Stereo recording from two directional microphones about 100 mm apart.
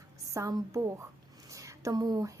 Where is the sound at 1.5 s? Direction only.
35° right (ahead or behind).